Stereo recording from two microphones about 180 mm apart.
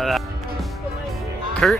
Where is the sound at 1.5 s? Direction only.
Centre (ahead or behind).